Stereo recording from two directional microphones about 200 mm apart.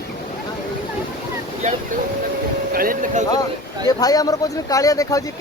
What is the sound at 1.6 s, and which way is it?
Speech, 35° right (ahead or behind).